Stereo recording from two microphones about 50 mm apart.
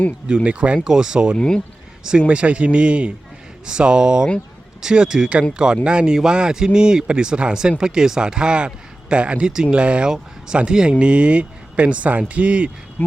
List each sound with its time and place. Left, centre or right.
0.4 s speech: right
0.9 s speech: centre
1.4 s speech: centre
2.0 s speech: right
13.0 s speech: left